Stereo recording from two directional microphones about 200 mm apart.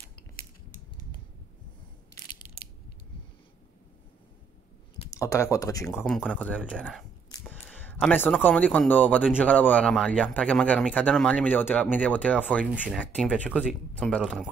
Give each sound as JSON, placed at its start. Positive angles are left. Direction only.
{"t": 5.1, "sound": "speech", "side_deg": 15}
{"t": 5.9, "sound": "speech", "side_deg": 5}
{"t": 12.7, "sound": "speech", "side_deg": -5}
{"t": 13.0, "sound": "speech", "side_deg": 5}